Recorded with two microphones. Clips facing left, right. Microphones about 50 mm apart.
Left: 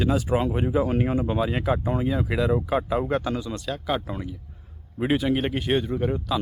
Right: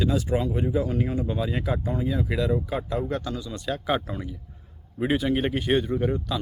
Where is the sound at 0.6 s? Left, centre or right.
Left.